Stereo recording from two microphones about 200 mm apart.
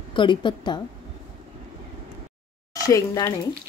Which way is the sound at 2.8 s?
15° left (ahead or behind).